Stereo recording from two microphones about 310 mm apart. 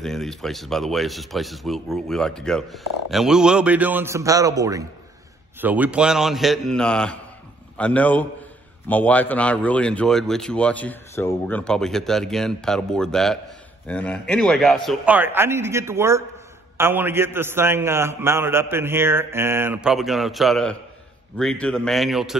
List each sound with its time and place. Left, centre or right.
0.0 s a man's voice: centre